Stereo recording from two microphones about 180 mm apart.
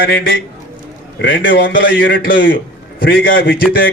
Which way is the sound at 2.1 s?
55° left (ahead or behind).